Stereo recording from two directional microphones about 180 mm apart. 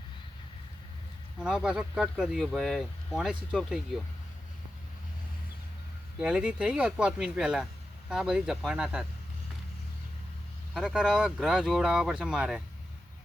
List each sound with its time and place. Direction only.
1.4 s speech: 5° right (ahead or behind)
6.1 s speech: 5° right (ahead or behind)
10.8 s speech: 5° right (ahead or behind)